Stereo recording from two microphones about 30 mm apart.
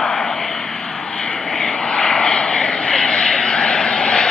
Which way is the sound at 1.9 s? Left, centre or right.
Left.